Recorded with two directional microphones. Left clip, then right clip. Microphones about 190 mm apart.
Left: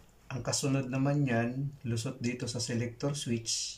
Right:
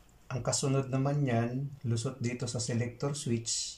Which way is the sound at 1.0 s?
15° right (ahead or behind).